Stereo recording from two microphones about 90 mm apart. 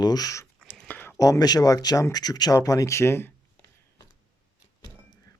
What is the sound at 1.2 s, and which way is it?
Speech, 45° left (ahead or behind).